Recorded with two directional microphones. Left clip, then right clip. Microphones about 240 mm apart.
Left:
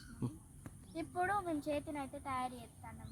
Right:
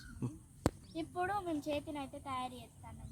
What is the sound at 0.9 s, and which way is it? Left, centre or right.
Speech, centre.